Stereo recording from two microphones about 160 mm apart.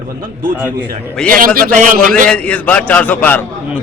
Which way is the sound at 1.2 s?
60° right (ahead or behind).